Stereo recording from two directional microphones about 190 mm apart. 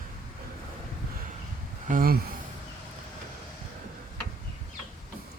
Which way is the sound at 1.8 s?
50° right (ahead or behind).